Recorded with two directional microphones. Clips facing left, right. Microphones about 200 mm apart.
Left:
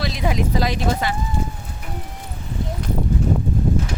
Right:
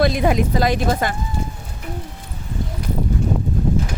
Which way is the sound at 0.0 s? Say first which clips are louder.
Right 6 dB; 55° right (ahead or behind).